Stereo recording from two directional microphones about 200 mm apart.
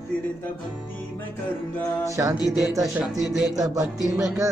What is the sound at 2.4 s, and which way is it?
Speech, centre (ahead or behind).